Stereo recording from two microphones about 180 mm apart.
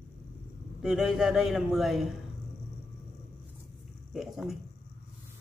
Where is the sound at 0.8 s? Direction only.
5° right (ahead or behind).